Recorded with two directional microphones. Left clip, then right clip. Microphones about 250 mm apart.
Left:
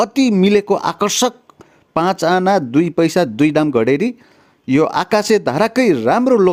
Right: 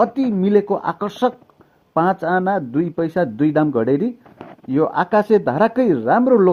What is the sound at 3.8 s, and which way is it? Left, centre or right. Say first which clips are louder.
Speech: left 3 dB; left.